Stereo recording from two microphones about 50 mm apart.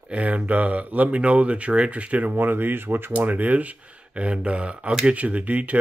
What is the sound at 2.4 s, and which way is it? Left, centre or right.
Speech, right.